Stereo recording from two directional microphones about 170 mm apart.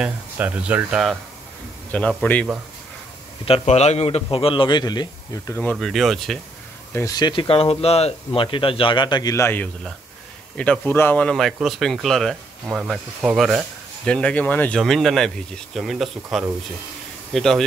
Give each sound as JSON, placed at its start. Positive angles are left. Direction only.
{"t": 0.0, "sound": "speech", "side_deg": -10}
{"t": 1.9, "sound": "a man's voice", "side_deg": 5}
{"t": 3.4, "sound": "speech", "side_deg": 35}
{"t": 6.9, "sound": "speech", "side_deg": 15}